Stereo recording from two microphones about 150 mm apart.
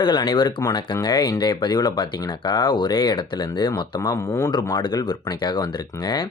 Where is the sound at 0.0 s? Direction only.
30° left (ahead or behind).